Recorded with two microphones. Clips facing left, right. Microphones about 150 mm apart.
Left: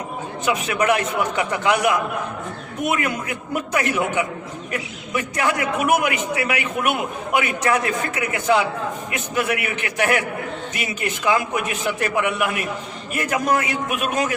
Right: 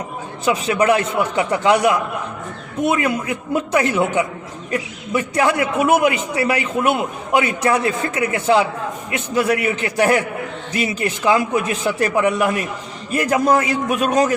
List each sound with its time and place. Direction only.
0.4 s a man's voice: 30° right (ahead or behind)